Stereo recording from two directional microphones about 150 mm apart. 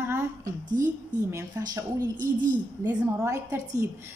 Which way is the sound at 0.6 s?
60° right (ahead or behind).